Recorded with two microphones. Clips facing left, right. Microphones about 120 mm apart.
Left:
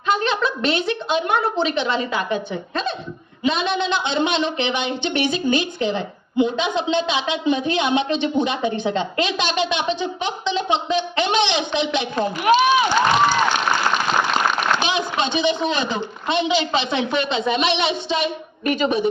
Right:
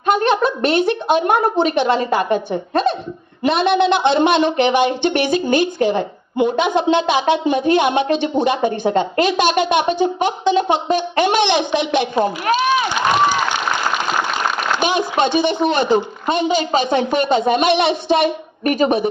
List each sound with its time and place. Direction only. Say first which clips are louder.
0.0 s a woman's voice: right 5 dB; 55° right (ahead or behind)
14.8 s a sound: right 5 dB; 50° right (ahead or behind)
15.4 s a woman's voice: right 4 dB; 55° right (ahead or behind)